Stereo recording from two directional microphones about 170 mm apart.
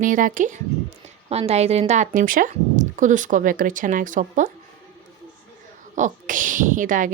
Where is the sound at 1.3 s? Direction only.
35° right (ahead or behind).